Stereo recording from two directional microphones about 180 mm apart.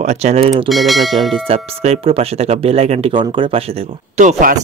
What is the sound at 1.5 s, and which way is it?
Speech, 35° right (ahead or behind).